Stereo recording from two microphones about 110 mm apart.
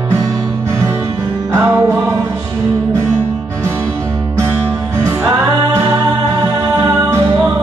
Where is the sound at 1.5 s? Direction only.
25° right (ahead or behind).